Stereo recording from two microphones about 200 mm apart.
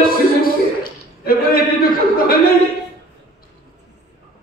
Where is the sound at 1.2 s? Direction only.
45° left (ahead or behind).